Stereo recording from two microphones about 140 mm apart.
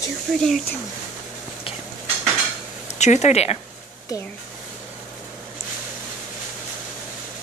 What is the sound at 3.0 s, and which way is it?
Speech, 55° left (ahead or behind).